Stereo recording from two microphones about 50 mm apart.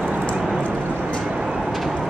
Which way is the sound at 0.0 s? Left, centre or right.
Right.